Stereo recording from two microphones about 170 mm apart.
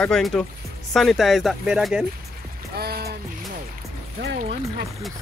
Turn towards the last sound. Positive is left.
turn(degrees=-65)  # may be behind; listen again after turning